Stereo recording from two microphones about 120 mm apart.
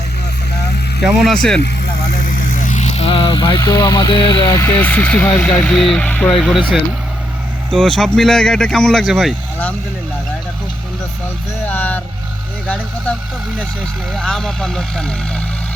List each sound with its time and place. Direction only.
1.0 s speech: 5° right (ahead or behind)
1.3 s speech: 5° left (ahead or behind)
2.6 s a sound: 85° left; by 3.6 s 40° left (ahead or behind)
3.6 s speech: 30° left (ahead or behind)
4.4 s speech: 20° left (ahead or behind)
5.6 s speech: 5° left (ahead or behind)
7.7 s speech: 5° left (ahead or behind)
11.6 s vehicle: 15° left (ahead or behind)
12.6 s speech: 10° left (ahead or behind)